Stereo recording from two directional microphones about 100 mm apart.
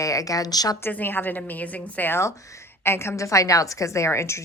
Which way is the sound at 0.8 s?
20° left (ahead or behind).